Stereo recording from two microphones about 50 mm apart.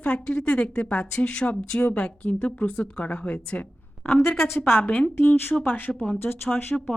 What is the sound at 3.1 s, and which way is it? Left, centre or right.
A woman's voice, left.